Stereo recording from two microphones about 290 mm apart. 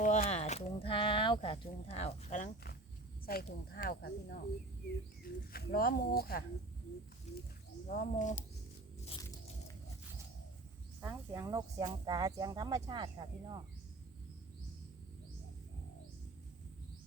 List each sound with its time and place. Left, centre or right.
0.0 s speech: left
5.5 s speech: left
7.9 s speech: left
11.0 s speech: centre